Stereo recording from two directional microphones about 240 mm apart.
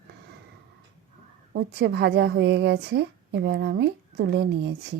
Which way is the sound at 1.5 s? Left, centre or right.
Right.